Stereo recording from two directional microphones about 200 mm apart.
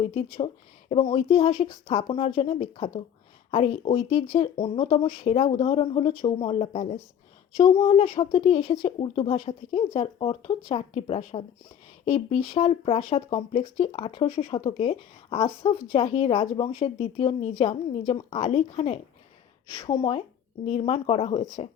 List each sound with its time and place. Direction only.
0.3 s speech: 30° left (ahead or behind)